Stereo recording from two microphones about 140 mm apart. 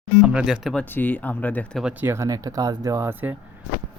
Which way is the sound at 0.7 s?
10° left (ahead or behind).